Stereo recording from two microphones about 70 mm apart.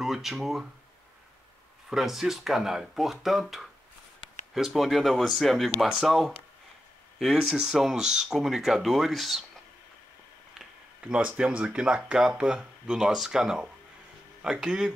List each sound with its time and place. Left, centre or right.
0.0 s speech: centre
1.9 s speech: centre
11.0 s speech: centre